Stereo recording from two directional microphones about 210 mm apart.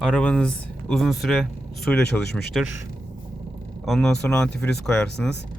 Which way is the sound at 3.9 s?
5° left (ahead or behind).